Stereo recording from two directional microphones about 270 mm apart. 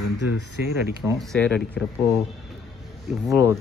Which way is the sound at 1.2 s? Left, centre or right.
Centre.